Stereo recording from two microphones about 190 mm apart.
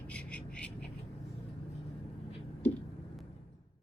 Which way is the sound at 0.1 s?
5° left (ahead or behind).